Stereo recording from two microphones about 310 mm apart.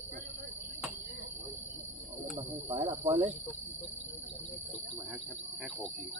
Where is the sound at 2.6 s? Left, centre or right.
Centre.